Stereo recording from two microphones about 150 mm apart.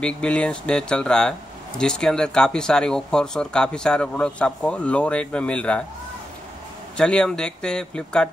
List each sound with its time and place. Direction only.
0.0 s speech: 5° left (ahead or behind)
7.0 s speech: 5° left (ahead or behind)